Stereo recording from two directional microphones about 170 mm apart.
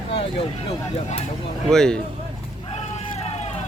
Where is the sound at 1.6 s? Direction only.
5° left (ahead or behind).